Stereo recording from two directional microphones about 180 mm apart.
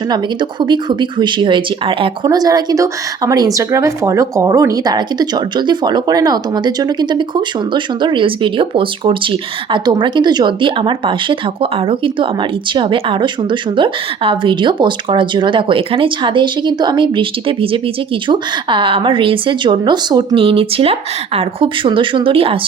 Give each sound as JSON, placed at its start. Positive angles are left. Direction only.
{"t": 0.6, "sound": "speech", "side_deg": -25}